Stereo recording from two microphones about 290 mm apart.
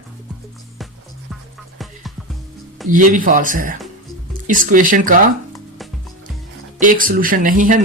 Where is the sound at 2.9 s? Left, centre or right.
Right.